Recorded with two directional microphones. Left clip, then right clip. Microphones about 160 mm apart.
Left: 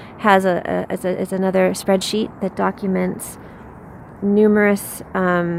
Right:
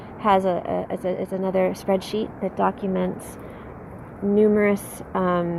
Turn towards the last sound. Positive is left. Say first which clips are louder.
# left 4 dB
turn(degrees=35)  # may be behind; listen again after turning